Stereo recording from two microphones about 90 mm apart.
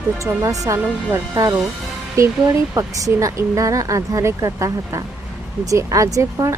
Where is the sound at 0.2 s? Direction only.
40° right (ahead or behind).